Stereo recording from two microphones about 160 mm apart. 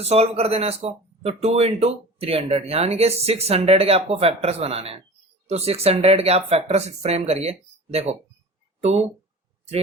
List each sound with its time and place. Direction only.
0.0 s speech: 40° right (ahead or behind)